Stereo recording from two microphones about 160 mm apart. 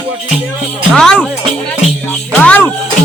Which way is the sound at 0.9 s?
5° left (ahead or behind).